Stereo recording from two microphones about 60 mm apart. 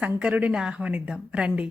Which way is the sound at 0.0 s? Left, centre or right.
Right.